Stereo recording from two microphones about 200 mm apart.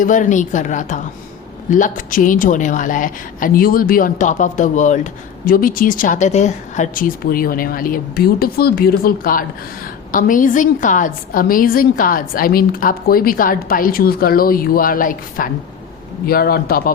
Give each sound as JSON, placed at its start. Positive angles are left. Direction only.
{"t": 0.0, "sound": "a woman's voice", "side_deg": 40}